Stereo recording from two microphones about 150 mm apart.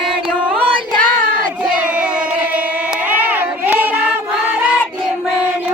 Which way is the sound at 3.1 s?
10° right (ahead or behind).